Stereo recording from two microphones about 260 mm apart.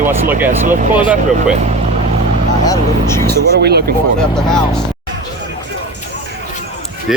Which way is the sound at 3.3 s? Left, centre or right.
Right.